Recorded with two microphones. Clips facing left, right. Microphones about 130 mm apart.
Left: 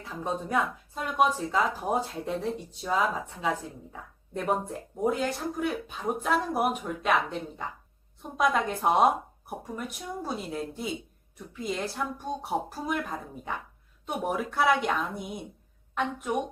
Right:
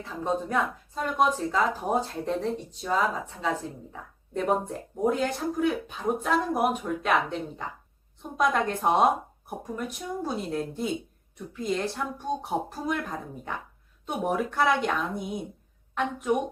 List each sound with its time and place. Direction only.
0.0 s speech: 5° left (ahead or behind)
10.2 s speech: centre (ahead or behind)